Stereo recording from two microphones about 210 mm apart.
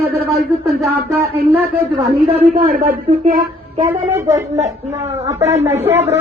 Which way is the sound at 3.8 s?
15° right (ahead or behind).